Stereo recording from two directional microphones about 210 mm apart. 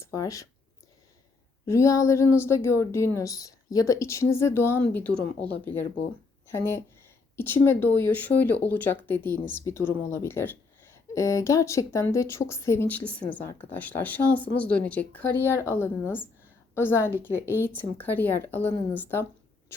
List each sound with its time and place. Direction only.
0.0 s speech: 15° left (ahead or behind)
1.6 s a woman's voice: 15° left (ahead or behind)